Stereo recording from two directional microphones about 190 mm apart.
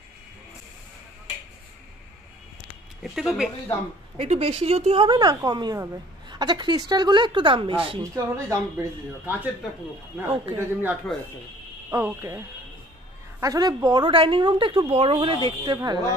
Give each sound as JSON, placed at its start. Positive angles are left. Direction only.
{"t": 3.0, "sound": "speech", "side_deg": 0}
{"t": 4.2, "sound": "a woman's voice", "side_deg": -30}
{"t": 8.0, "sound": "speech", "side_deg": -15}
{"t": 10.6, "sound": "a woman's voice", "side_deg": -10}